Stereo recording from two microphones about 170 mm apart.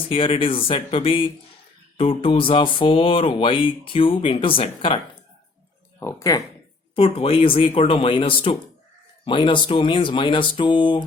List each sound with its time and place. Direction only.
0.1 s speech: 30° left (ahead or behind)
6.0 s speech: 15° left (ahead or behind)
6.9 s speech: 35° left (ahead or behind)